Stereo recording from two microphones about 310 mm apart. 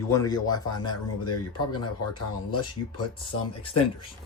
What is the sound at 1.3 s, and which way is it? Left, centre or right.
Speech, left.